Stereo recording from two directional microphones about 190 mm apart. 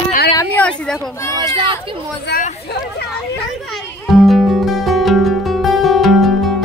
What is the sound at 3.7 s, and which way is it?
Music, centre (ahead or behind).